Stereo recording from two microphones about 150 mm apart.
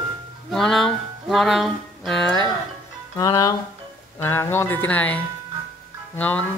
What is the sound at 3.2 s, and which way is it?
Speech, 25° left (ahead or behind).